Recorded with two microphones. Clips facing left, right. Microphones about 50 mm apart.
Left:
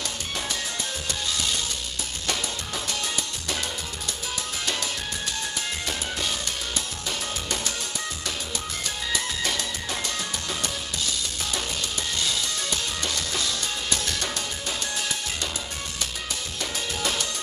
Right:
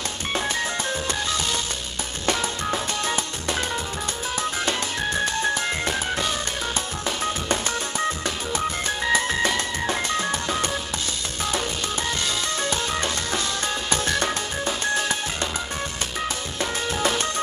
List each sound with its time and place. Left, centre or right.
4.6 s music: right
8.5 s music: right
12.6 s music: right
17.0 s music: right